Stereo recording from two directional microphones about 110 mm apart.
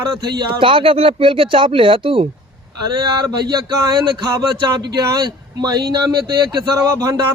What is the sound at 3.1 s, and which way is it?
Speech, 40° right (ahead or behind).